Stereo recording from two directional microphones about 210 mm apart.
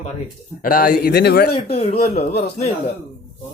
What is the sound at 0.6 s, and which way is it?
Speech, 40° left (ahead or behind).